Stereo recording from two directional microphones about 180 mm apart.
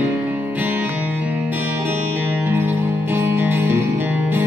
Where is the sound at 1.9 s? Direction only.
10° right (ahead or behind).